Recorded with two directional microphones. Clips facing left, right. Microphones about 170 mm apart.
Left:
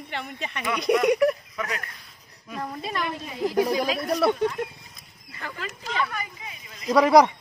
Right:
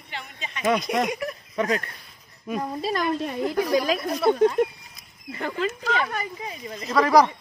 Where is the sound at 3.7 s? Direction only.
50° right (ahead or behind).